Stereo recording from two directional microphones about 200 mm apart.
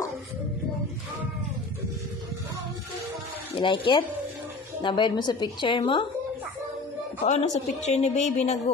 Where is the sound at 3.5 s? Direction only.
25° left (ahead or behind).